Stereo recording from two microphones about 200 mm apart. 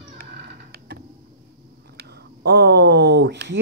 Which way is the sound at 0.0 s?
50° right (ahead or behind).